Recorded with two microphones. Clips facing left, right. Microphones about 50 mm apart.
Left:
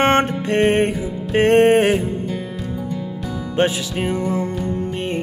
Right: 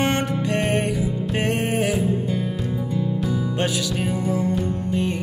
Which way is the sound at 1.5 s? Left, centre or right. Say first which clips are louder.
Left 12 dB; left.